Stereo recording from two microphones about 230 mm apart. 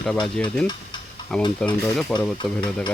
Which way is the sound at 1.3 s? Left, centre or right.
Centre.